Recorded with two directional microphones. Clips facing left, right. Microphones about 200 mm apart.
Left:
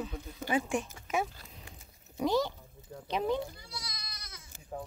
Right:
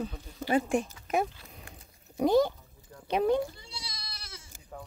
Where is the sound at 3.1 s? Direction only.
55° right (ahead or behind).